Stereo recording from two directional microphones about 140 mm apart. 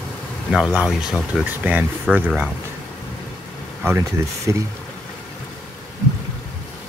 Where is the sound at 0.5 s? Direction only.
Centre (ahead or behind).